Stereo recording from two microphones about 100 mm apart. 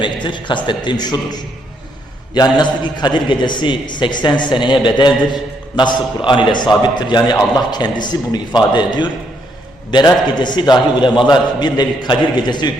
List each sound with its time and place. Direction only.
0.0 s a man's voice: 50° left (ahead or behind)